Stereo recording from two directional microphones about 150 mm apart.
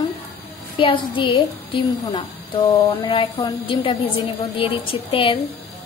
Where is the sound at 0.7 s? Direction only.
35° left (ahead or behind).